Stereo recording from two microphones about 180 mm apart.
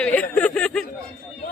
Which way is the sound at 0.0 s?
5° left (ahead or behind).